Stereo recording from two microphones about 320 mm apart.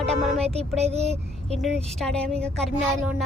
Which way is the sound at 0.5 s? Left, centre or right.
Centre.